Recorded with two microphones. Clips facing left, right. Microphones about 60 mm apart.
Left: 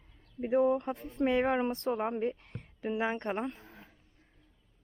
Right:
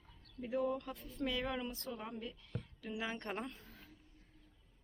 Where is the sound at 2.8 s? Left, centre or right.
Left.